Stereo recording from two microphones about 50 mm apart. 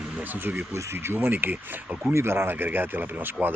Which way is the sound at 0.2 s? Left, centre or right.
Right.